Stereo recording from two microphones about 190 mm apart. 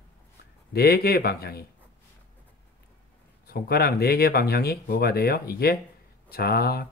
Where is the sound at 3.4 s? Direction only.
55° left (ahead or behind).